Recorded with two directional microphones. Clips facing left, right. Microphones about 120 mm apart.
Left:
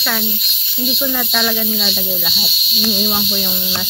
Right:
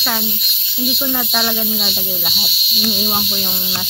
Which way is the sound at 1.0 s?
15° right (ahead or behind).